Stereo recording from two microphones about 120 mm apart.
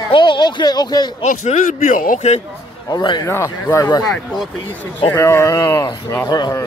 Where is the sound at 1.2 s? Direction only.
90° left; by 2.4 s 70° left (ahead or behind).